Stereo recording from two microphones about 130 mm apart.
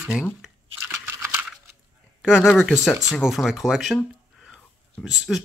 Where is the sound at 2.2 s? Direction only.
5° right (ahead or behind).